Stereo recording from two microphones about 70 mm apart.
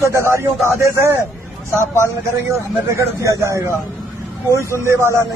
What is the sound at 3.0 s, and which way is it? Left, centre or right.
Speech, right.